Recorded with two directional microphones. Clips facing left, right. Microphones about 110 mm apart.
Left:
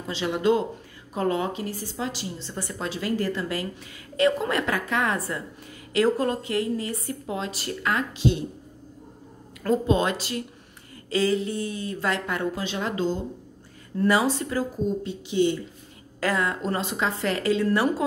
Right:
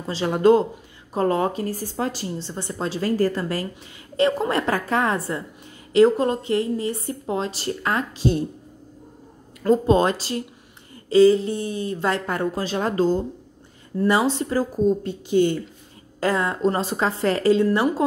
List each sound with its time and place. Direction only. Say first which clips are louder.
0.0 s a woman's voice: right 6 dB; 40° right (ahead or behind)
2.4 s a woman's voice: right 2 dB; 30° right (ahead or behind)
9.8 s a woman's voice: right 5 dB; 35° right (ahead or behind)
14.0 s a woman's voice: right 2 dB; 25° right (ahead or behind); by 15.5 s 45° right (ahead or behind)
16.2 s a woman's voice: right 4 dB; 30° right (ahead or behind)